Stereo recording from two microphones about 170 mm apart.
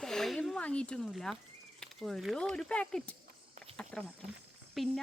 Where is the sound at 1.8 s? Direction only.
Centre (ahead or behind).